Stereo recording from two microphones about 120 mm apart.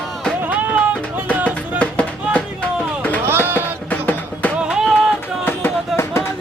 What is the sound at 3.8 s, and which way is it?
Music, 15° left (ahead or behind).